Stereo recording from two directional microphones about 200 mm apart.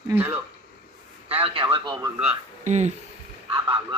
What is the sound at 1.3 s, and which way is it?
Speech, 30° right (ahead or behind).